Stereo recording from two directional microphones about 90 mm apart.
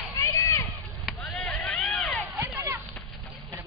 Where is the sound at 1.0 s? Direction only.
Centre (ahead or behind).